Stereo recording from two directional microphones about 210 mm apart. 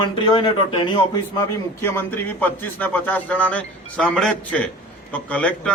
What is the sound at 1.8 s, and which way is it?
A man's voice, 10° left (ahead or behind).